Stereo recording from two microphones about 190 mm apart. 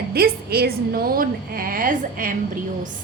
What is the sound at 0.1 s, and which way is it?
A woman's voice, 55° right (ahead or behind).